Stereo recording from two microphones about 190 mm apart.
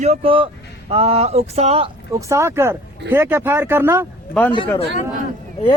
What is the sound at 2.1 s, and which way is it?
Speech, 15° right (ahead or behind).